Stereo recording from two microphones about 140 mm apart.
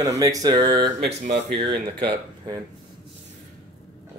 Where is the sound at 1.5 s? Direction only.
35° right (ahead or behind).